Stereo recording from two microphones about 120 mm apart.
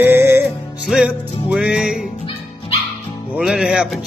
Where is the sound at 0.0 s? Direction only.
15° right (ahead or behind).